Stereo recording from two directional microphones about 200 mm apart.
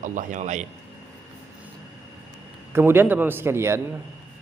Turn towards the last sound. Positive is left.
turn(degrees=-15)  # may be behind; listen again after turning